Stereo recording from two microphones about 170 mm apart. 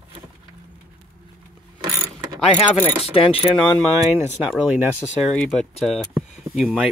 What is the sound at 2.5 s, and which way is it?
Speech, 35° left (ahead or behind).